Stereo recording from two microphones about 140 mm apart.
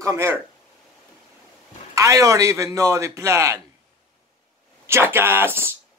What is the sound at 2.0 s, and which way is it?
A man's voice, 20° right (ahead or behind).